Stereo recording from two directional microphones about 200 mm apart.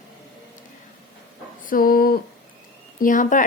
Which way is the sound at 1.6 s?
45° left (ahead or behind).